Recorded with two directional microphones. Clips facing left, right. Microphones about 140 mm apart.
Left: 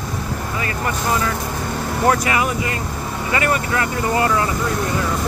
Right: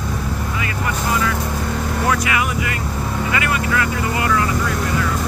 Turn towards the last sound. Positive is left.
turn(degrees=30)  # may be behind; listen again after turning